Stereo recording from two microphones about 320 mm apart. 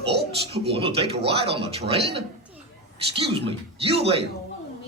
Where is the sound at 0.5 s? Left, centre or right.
Centre.